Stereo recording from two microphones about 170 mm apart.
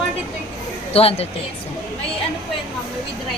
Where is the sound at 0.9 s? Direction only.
35° left (ahead or behind).